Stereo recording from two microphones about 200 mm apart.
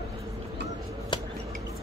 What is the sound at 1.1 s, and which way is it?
Drip, 25° left (ahead or behind).